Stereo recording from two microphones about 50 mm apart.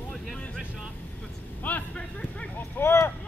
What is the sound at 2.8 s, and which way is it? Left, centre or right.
Vehicle, left.